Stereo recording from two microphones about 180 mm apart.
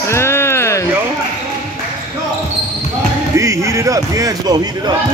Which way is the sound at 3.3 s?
15° right (ahead or behind).